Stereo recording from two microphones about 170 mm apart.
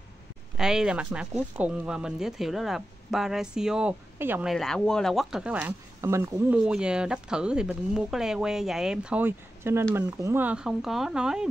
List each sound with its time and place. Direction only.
0.6 s speech: 5° right (ahead or behind)
4.5 s speech: 5° left (ahead or behind); by 6.6 s 15° right (ahead or behind)
6.6 s speech: 5° right (ahead or behind)